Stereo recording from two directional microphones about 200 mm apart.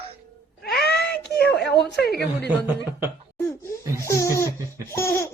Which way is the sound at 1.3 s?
55° left (ahead or behind).